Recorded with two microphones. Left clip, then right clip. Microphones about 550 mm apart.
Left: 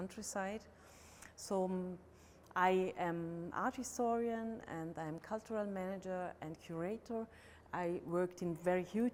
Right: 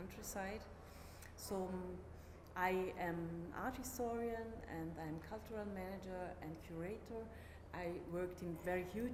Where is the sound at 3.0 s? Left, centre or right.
Left.